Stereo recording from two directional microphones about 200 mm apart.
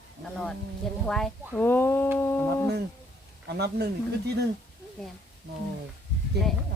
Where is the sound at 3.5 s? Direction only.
55° right (ahead or behind).